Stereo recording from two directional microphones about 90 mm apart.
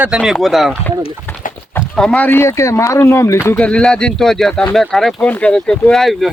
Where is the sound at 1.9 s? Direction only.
5° left (ahead or behind).